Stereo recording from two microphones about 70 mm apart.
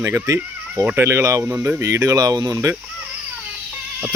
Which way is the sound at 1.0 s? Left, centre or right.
Right.